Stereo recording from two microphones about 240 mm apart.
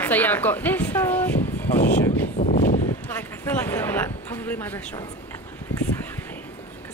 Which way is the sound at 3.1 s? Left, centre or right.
Centre.